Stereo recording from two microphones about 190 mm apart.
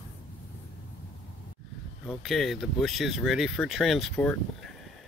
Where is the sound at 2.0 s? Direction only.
Centre (ahead or behind).